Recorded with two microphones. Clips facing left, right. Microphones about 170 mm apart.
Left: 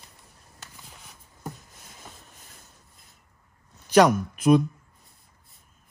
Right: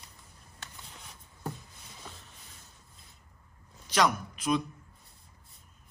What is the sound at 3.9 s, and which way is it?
Speech, 55° left (ahead or behind).